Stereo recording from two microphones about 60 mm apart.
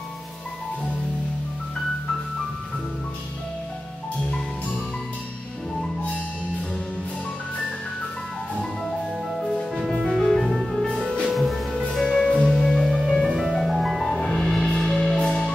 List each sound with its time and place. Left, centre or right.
8.8 s music: centre
11.3 s music: centre
13.3 s music: centre